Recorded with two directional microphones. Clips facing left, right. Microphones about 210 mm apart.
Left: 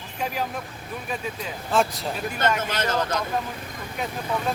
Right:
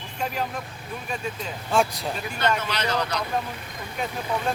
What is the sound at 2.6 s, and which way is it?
Speech, 50° left (ahead or behind).